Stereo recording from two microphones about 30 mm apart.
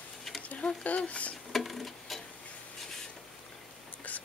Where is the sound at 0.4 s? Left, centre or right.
Left.